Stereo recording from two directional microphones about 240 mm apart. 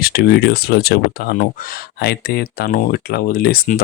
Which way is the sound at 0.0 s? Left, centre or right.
Left.